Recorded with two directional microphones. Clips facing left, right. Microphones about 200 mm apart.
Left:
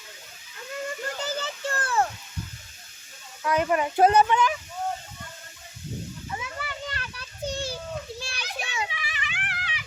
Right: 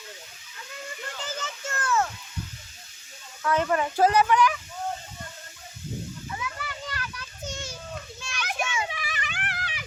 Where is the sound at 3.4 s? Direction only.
15° left (ahead or behind).